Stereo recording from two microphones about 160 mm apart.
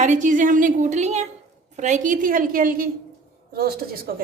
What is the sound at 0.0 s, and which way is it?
A woman's voice, 50° right (ahead or behind).